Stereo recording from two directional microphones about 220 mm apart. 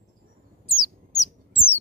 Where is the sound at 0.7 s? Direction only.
15° left (ahead or behind).